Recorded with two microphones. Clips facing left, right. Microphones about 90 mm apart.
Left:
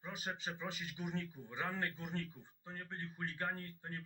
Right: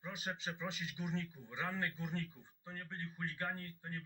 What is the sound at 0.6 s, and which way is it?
Speech, 45° left (ahead or behind).